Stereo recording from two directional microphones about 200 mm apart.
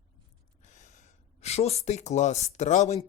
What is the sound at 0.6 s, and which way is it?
Speech, 35° left (ahead or behind).